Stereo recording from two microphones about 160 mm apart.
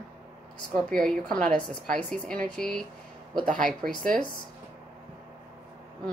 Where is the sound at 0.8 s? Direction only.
5° left (ahead or behind).